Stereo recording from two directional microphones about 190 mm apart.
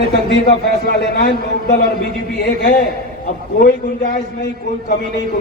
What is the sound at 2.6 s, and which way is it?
A man's voice, 50° left (ahead or behind).